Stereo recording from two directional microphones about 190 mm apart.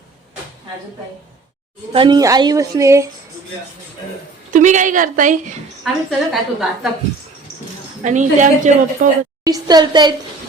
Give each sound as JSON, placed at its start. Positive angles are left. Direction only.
{"t": 1.9, "sound": "a woman's voice", "side_deg": -25}
{"t": 4.5, "sound": "a woman's voice", "side_deg": -40}
{"t": 5.8, "sound": "a woman's voice", "side_deg": 0}
{"t": 8.0, "sound": "a woman's voice", "side_deg": -40}
{"t": 9.4, "sound": "a woman's voice", "side_deg": -20}